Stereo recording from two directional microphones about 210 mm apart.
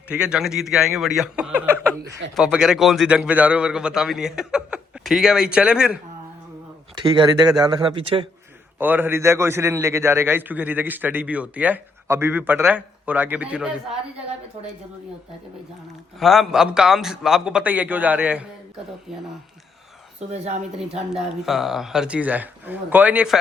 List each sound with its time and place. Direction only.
0.1 s a man's voice: 5° right (ahead or behind)
6.9 s speech: 20° right (ahead or behind)
8.8 s a man's voice: 10° right (ahead or behind)
16.1 s a man's voice: centre (ahead or behind)
20.1 s a woman's voice: 30° right (ahead or behind)
20.7 s a man's voice: 5° right (ahead or behind)